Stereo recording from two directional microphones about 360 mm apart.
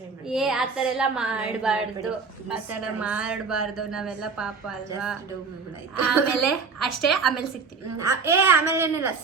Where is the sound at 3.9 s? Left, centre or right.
Centre.